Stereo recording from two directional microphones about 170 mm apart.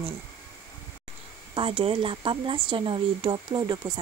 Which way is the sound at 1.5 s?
30° right (ahead or behind).